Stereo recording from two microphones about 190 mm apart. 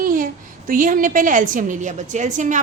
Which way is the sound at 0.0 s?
45° right (ahead or behind).